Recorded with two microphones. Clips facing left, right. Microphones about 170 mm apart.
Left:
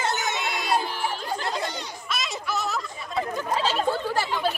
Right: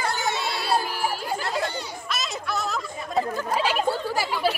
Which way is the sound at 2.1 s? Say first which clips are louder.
Even; centre (ahead or behind).